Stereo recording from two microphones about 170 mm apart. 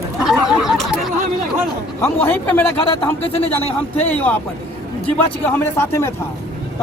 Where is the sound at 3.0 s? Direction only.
35° left (ahead or behind).